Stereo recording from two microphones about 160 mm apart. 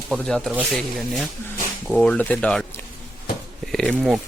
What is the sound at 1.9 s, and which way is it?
Speech, 5° left (ahead or behind).